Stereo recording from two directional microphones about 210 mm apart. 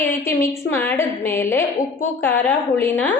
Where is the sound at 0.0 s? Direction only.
10° left (ahead or behind).